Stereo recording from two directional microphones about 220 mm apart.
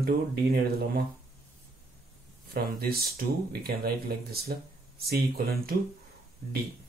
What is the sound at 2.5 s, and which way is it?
Speech, 45° right (ahead or behind).